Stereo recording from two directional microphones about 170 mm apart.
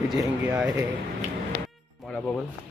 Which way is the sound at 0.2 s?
10° right (ahead or behind).